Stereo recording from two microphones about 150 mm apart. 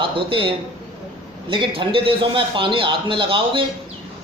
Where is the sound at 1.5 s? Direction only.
35° right (ahead or behind).